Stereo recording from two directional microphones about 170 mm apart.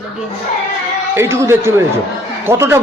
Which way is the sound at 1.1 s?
15° right (ahead or behind).